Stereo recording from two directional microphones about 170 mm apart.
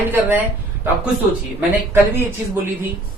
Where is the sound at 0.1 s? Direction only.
15° right (ahead or behind).